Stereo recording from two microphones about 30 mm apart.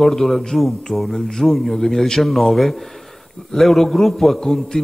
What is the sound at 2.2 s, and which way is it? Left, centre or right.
A man's voice, centre.